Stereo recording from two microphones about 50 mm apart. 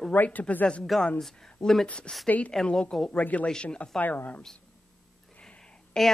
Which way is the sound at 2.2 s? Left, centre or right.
Left.